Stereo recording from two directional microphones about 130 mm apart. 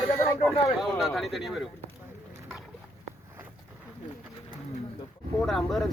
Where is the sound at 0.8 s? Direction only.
Centre (ahead or behind).